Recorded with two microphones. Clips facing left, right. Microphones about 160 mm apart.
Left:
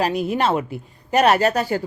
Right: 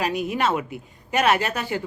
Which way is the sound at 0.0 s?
35° left (ahead or behind).